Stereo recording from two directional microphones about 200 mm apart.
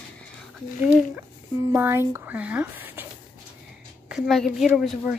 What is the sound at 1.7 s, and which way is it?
Speech, 15° right (ahead or behind).